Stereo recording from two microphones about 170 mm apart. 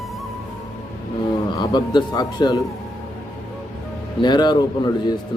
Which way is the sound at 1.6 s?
25° left (ahead or behind).